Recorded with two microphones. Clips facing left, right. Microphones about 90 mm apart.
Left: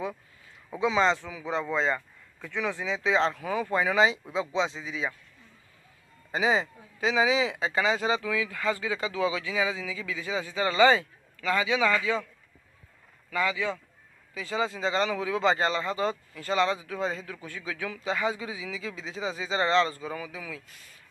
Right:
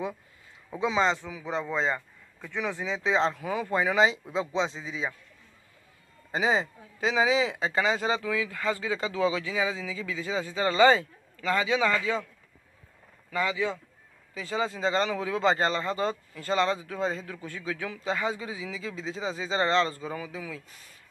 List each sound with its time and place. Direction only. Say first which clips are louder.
0.7 s a man's voice: left 1 dB; 20° right (ahead or behind)
4.2 s speech: even; 10° left (ahead or behind)
4.7 s a man's voice: left 1 dB; 25° right (ahead or behind)
6.3 s a man's voice: even; 25° right (ahead or behind)
13.3 s a man's voice: even; 25° right (ahead or behind)